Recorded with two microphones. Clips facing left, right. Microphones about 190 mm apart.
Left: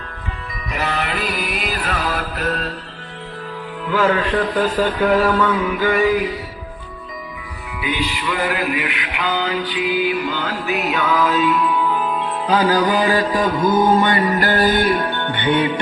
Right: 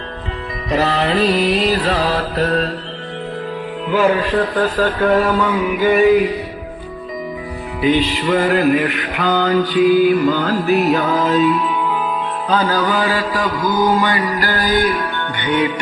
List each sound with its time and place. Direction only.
0.7 s music: 35° right (ahead or behind)
3.8 s music: 20° right (ahead or behind)
4.2 s mantra: 5° right (ahead or behind)
4.5 s a sound: 10° left (ahead or behind)
5.0 s music: centre (ahead or behind)
5.4 s mantra: 15° right (ahead or behind)
7.8 s music: 40° right (ahead or behind)
12.5 s mantra: 15° left (ahead or behind); by 15.7 s 30° left (ahead or behind)